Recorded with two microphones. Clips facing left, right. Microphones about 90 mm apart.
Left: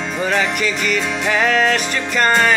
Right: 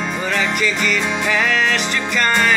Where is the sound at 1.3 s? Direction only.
40° left (ahead or behind).